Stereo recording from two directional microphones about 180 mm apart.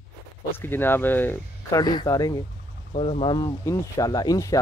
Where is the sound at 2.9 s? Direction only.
35° left (ahead or behind).